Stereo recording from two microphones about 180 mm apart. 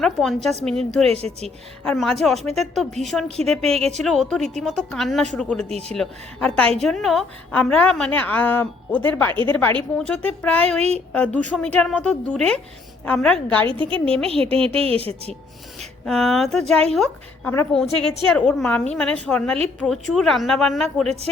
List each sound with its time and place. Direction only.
0.0 s a woman's voice: centre (ahead or behind)
1.1 s a woman's voice: 35° right (ahead or behind)
1.5 s a woman's voice: centre (ahead or behind)
3.7 s a woman's voice: 35° right (ahead or behind)
4.0 s a woman's voice: centre (ahead or behind)
5.6 s a woman's voice: 35° right (ahead or behind)
5.9 s a woman's voice: 5° left (ahead or behind)
13.7 s a woman's voice: 30° right (ahead or behind)
15.8 s a woman's voice: centre (ahead or behind)